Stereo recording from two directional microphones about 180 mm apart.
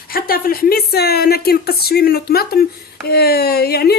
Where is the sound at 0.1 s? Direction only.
55° left (ahead or behind).